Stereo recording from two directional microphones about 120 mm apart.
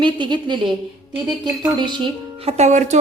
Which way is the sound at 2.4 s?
65° right (ahead or behind).